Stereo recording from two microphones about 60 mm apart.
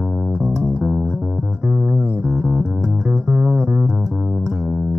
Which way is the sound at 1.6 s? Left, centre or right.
Right.